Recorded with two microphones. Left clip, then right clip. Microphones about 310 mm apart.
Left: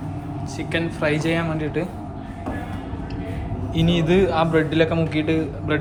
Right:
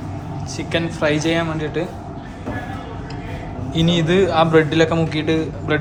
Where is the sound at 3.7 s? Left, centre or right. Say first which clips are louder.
Right 2 dB; centre.